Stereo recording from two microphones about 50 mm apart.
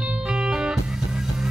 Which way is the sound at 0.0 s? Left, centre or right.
Centre.